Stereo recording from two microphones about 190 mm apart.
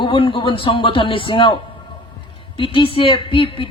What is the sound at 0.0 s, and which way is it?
A woman's voice, 25° left (ahead or behind).